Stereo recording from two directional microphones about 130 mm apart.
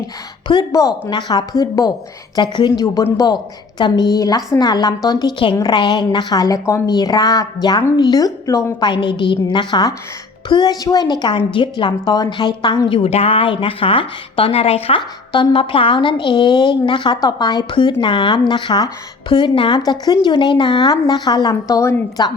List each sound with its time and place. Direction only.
0.4 s a woman's voice: 30° left (ahead or behind)
2.8 s a woman's voice: 25° left (ahead or behind)
8.9 s a woman's voice: 40° left (ahead or behind)